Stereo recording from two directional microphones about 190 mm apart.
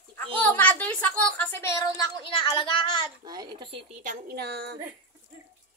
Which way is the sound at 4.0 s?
50° right (ahead or behind).